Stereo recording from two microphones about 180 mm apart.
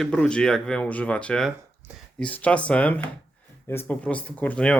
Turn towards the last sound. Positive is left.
turn(degrees=5)  # may be behind; listen again after turning